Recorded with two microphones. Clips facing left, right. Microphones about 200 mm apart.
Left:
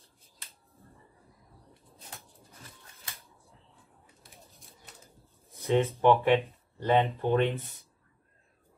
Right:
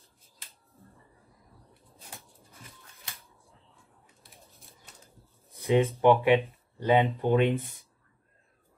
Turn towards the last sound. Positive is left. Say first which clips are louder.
# right 2 dB
turn(degrees=-15)  # may be behind; listen again after turning